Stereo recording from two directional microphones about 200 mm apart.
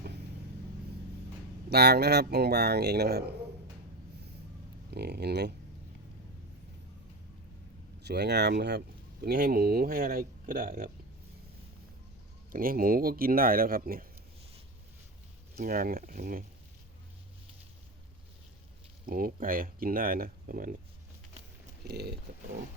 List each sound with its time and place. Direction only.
1.7 s speech: 55° right (ahead or behind)
4.9 s speech: 55° right (ahead or behind)
8.0 s speech: 55° right (ahead or behind)
12.5 s speech: 45° right (ahead or behind)
15.5 s speech: 45° right (ahead or behind)
19.0 s speech: 45° right (ahead or behind)
21.8 s speech: 55° right (ahead or behind)